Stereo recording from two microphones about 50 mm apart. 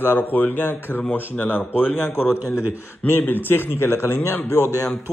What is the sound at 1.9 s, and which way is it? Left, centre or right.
Speech, left.